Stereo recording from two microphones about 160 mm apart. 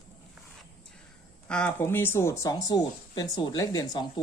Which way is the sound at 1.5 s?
10° left (ahead or behind).